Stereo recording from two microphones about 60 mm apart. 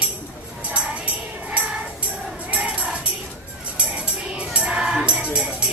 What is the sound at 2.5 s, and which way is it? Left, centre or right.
Music, right.